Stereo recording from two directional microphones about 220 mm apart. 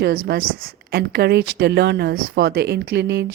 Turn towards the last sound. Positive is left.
turn(degrees=-50)  # may be behind; listen again after turning